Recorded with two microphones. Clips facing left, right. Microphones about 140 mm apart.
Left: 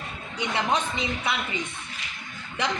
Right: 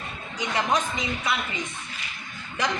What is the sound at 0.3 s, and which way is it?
A woman's voice, 25° left (ahead or behind).